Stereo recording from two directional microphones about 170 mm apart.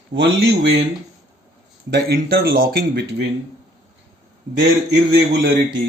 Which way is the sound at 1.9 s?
70° right (ahead or behind).